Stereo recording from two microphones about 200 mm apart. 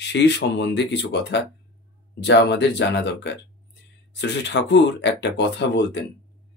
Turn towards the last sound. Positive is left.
turn(degrees=60)  # may be behind; listen again after turning